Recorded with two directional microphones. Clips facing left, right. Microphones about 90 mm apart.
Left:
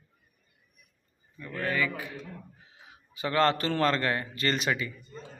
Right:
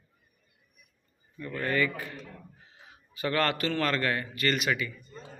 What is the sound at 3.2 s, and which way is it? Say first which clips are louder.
A man's voice: left 3 dB; 20° left (ahead or behind).